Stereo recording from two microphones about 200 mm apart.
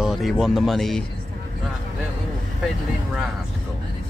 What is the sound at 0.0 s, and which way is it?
Speech, centre (ahead or behind).